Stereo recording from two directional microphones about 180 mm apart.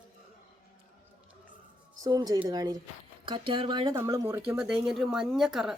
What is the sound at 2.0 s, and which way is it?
Speech, 20° right (ahead or behind).